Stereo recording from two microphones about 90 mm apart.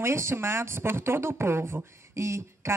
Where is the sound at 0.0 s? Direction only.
30° right (ahead or behind).